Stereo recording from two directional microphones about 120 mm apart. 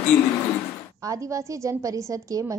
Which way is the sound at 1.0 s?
25° right (ahead or behind).